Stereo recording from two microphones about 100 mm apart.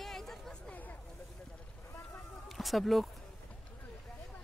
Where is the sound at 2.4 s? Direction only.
Centre (ahead or behind).